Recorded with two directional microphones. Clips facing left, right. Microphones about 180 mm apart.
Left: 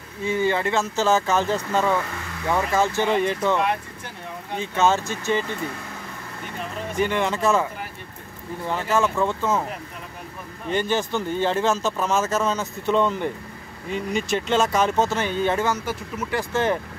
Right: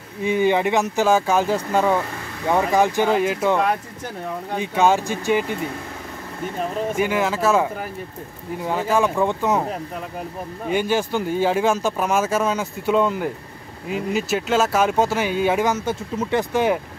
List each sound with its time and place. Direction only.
0.2 s speech: 15° right (ahead or behind)
3.1 s speech: 5° right (ahead or behind)
4.6 s speech: 10° right (ahead or behind)
7.0 s speech: 5° right (ahead or behind)
8.6 s speech: 10° right (ahead or behind)
10.7 s speech: 10° right (ahead or behind)